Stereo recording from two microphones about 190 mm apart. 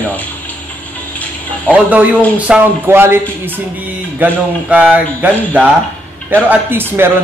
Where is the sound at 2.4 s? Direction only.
10° right (ahead or behind).